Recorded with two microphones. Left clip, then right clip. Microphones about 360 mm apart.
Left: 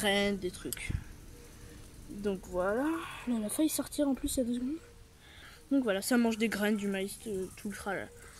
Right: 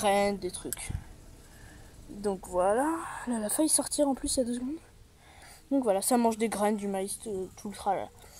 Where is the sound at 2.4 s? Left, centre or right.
Right.